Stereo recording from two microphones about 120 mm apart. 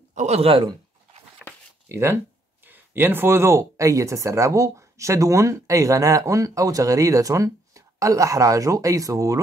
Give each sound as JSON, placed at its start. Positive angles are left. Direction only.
{"t": 0.1, "sound": "a man's voice", "side_deg": -70}
{"t": 1.4, "sound": "a sound", "side_deg": 10}
{"t": 1.9, "sound": "speech", "side_deg": -20}